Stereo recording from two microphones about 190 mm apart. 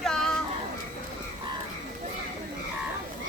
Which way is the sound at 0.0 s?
Centre (ahead or behind).